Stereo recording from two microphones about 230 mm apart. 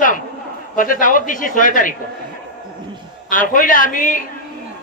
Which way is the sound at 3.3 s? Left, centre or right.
Left.